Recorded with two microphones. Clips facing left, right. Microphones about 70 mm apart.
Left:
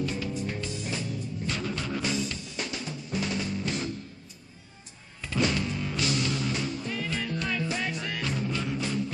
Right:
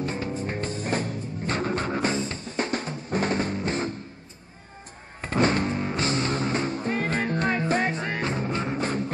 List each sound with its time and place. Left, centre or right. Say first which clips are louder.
0.0 s music: right 2 dB; right
5.2 s music: right 5 dB; right